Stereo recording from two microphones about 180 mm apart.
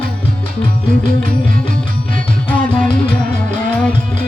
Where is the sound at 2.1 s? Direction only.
5° left (ahead or behind).